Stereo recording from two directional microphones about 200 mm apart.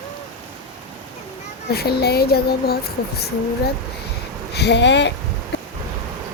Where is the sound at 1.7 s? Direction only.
50° left (ahead or behind).